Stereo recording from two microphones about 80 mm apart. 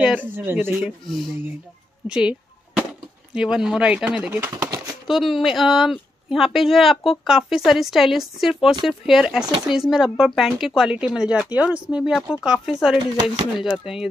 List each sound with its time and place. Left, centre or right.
0.0 s speech: centre
2.0 s a sound: centre
4.3 s speech: right
5.0 s speech: centre
12.0 s speech: centre